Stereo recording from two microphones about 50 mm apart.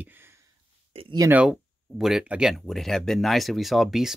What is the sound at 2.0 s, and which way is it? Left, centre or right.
Speech, centre.